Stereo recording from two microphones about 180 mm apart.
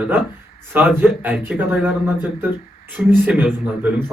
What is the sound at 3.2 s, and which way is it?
Speech, 10° right (ahead or behind).